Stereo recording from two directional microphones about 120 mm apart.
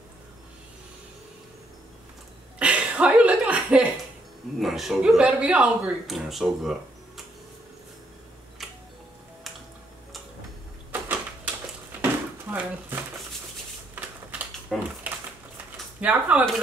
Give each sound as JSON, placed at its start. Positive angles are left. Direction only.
{"t": 2.6, "sound": "chuckle", "side_deg": -10}
{"t": 4.6, "sound": "speech", "side_deg": 0}
{"t": 10.9, "sound": "a sound", "side_deg": -15}
{"t": 14.0, "sound": "typewriter", "side_deg": -15}
{"t": 14.7, "sound": "typewriter", "side_deg": 0}
{"t": 16.0, "sound": "speech", "side_deg": -10}